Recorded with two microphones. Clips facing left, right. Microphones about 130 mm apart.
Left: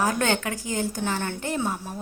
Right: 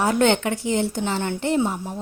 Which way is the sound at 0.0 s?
25° right (ahead or behind).